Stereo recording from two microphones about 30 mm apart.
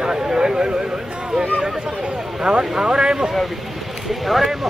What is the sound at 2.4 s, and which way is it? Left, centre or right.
Speech, right.